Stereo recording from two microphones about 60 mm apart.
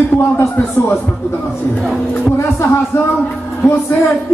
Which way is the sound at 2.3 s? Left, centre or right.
Left.